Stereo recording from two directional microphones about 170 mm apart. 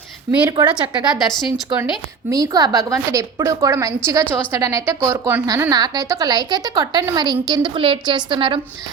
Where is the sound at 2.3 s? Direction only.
20° right (ahead or behind).